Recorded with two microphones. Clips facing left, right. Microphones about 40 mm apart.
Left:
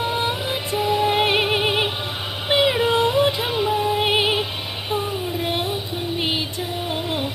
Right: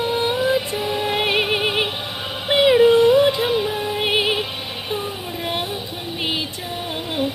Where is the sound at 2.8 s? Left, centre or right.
Left.